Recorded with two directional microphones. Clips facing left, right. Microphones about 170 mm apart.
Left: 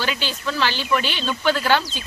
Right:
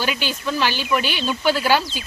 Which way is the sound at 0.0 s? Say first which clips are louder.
Right 1 dB; 15° right (ahead or behind).